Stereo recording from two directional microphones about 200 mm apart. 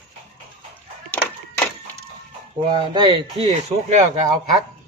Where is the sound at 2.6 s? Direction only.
20° right (ahead or behind).